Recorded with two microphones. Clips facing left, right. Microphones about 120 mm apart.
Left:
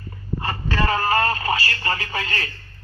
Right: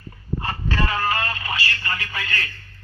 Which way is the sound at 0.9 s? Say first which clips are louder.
Left 7 dB; 35° left (ahead or behind).